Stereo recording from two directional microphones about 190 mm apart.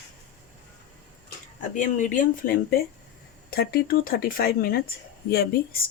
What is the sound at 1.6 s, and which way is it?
Speech, 40° left (ahead or behind).